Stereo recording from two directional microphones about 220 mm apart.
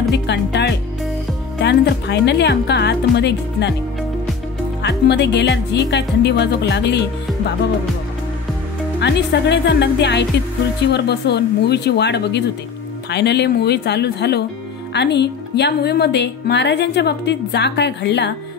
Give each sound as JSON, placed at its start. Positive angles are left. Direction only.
{"t": 0.1, "sound": "music", "side_deg": 50}
{"t": 1.6, "sound": "speech", "side_deg": 50}
{"t": 4.8, "sound": "speech", "side_deg": 50}
{"t": 9.0, "sound": "speech", "side_deg": 50}